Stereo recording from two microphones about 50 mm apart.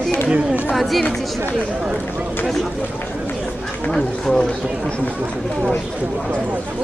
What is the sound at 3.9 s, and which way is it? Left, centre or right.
Speech, centre.